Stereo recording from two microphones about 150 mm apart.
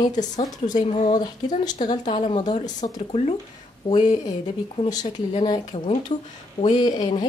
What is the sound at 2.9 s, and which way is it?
Speech, 45° left (ahead or behind).